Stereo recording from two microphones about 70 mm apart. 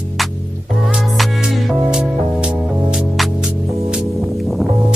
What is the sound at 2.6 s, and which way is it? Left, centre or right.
Music, centre.